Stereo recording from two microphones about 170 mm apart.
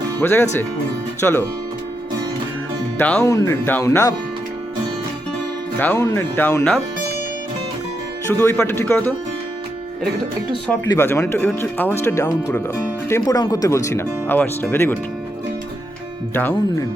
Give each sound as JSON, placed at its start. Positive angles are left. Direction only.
{"t": 0.2, "sound": "speech", "side_deg": 15}
{"t": 3.0, "sound": "speech", "side_deg": 10}
{"t": 3.2, "sound": "speech", "side_deg": 20}
{"t": 6.0, "sound": "speech", "side_deg": 15}
{"t": 8.3, "sound": "speech", "side_deg": 15}
{"t": 10.7, "sound": "speech", "side_deg": 15}
{"t": 16.3, "sound": "speech", "side_deg": 10}